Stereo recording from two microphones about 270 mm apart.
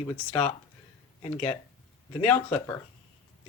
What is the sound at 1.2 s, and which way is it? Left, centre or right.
Speech, left.